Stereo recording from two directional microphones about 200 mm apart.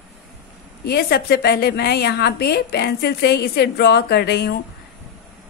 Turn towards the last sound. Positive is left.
turn(degrees=55)  # may be behind; listen again after turning